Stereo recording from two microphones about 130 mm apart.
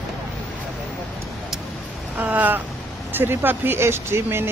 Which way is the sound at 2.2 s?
15° right (ahead or behind).